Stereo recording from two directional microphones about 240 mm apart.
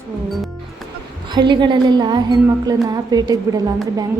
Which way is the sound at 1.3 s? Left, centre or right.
Centre.